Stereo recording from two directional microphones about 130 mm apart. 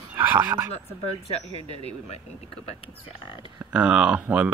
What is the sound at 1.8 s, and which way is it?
Speech, 50° left (ahead or behind).